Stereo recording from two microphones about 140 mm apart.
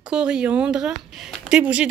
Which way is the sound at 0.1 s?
5° right (ahead or behind).